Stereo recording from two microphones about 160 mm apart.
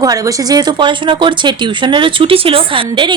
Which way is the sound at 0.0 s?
20° right (ahead or behind).